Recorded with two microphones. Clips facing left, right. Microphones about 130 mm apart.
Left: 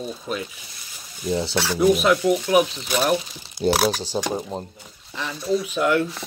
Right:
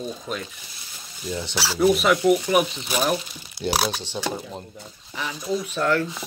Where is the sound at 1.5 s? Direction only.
5° right (ahead or behind).